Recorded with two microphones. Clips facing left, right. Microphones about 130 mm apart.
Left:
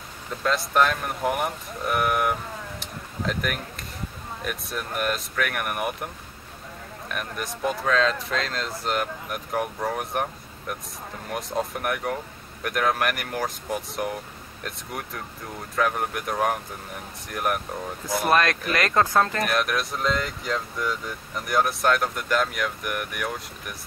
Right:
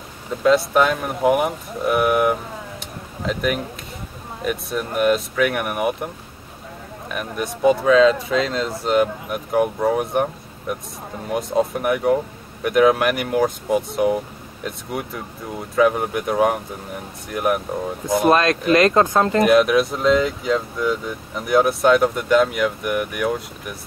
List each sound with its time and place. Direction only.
0.4 s speech: 5° right (ahead or behind)
2.8 s a sound: centre (ahead or behind)
4.5 s speech: centre (ahead or behind)
7.1 s speech: centre (ahead or behind)
18.0 s speech: 20° right (ahead or behind)
19.4 s speech: centre (ahead or behind)